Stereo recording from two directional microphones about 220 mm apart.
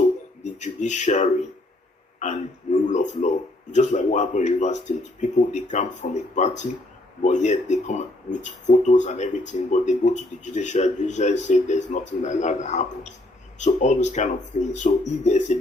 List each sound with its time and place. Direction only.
0.6 s speech: 35° left (ahead or behind)
2.1 s a sound: 35° left (ahead or behind)
2.8 s speech: 35° left (ahead or behind)